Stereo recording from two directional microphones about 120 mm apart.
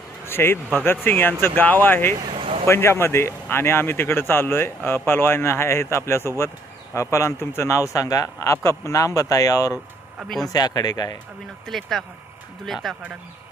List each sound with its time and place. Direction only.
0.3 s speech: 20° left (ahead or behind)
2.2 s vehicle: 45° right (ahead or behind)
2.6 s speech: 20° left (ahead or behind)
10.2 s speech: centre (ahead or behind)
10.5 s speech: 35° left (ahead or behind)
11.6 s speech: centre (ahead or behind)